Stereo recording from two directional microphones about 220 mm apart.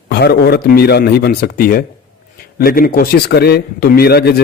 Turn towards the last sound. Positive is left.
turn(degrees=45)  # may be behind; listen again after turning